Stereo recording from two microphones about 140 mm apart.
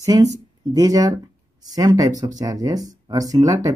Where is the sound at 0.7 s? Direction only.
25° right (ahead or behind).